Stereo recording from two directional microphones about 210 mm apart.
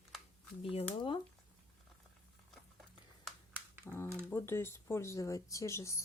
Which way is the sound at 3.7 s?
10° right (ahead or behind).